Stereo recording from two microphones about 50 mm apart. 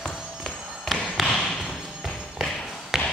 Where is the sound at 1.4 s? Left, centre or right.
Centre.